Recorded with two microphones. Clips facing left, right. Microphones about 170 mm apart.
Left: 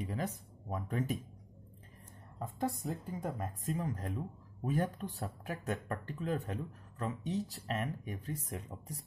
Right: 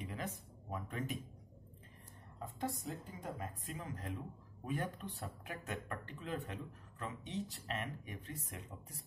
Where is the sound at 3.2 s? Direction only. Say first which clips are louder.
Left 4 dB; 45° left (ahead or behind).